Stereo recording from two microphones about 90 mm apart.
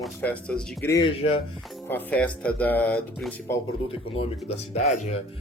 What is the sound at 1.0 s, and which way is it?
Speech, 90° left.